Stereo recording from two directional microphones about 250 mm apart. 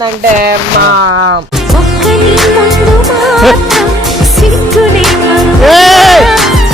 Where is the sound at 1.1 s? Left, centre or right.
Right.